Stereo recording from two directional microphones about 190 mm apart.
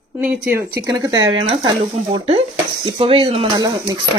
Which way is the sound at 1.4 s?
30° right (ahead or behind).